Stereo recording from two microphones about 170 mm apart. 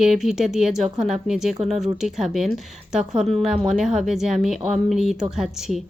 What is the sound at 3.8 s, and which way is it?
A woman's voice, 5° right (ahead or behind).